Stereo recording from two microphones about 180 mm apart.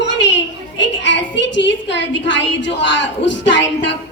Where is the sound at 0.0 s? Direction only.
80° left.